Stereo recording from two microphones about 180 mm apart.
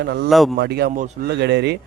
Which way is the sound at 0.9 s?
45° right (ahead or behind).